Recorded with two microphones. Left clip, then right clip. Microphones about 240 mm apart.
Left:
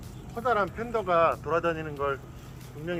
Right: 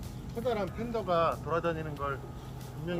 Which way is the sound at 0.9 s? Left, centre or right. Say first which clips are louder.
Left 5 dB; left.